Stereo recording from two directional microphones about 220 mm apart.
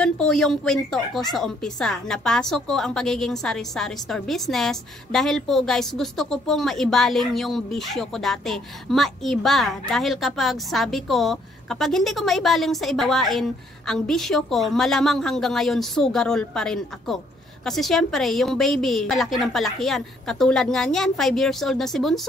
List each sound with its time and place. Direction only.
0.0 s speech: 5° left (ahead or behind)